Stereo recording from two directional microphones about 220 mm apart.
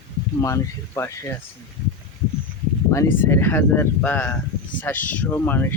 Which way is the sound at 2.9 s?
10° left (ahead or behind).